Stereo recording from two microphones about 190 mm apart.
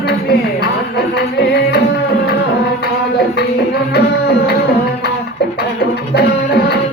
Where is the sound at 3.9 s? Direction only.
60° left (ahead or behind).